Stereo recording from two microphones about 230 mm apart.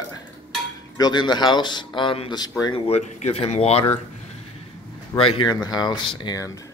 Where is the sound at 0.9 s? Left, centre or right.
Centre.